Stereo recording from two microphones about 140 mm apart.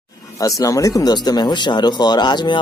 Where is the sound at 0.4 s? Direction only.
25° left (ahead or behind).